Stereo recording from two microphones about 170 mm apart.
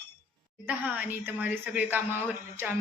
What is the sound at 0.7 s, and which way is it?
Speech, 10° right (ahead or behind).